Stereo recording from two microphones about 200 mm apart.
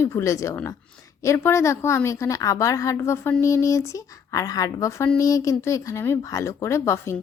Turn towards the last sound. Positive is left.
turn(degrees=15)  # may be behind; listen again after turning